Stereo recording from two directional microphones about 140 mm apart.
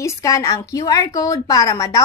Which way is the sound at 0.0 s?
20° left (ahead or behind).